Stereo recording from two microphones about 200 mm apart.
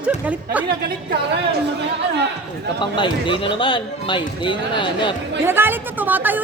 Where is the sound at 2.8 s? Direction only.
25° left (ahead or behind).